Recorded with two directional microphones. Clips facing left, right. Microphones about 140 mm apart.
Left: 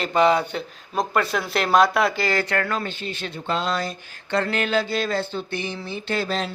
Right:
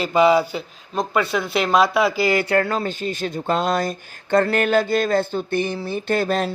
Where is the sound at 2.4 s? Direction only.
30° right (ahead or behind).